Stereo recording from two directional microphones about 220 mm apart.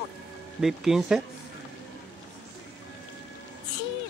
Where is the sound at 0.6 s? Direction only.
Centre (ahead or behind).